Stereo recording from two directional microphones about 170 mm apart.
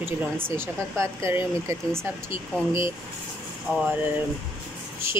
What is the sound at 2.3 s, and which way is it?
Speech, 30° left (ahead or behind).